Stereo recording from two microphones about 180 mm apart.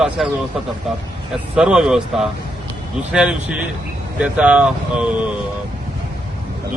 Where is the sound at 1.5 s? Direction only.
5° right (ahead or behind).